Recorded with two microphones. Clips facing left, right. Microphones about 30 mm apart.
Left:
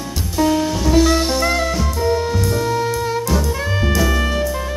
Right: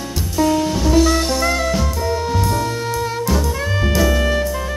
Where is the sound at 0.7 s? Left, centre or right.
Centre.